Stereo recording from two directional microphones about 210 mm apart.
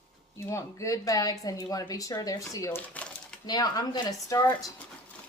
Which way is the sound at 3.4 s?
20° left (ahead or behind).